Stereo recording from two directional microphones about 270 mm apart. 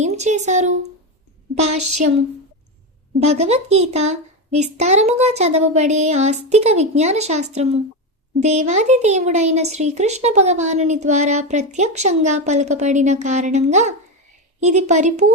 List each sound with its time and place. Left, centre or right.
0.0 s speech: right
1.6 s a woman's voice: right
3.2 s speech: right